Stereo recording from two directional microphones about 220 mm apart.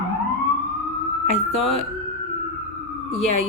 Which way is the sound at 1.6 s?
25° left (ahead or behind).